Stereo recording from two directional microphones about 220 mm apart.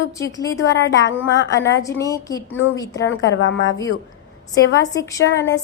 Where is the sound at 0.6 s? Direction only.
50° left (ahead or behind).